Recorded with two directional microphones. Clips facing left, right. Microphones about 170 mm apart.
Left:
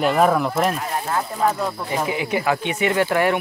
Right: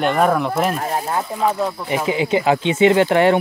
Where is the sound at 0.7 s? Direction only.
40° right (ahead or behind).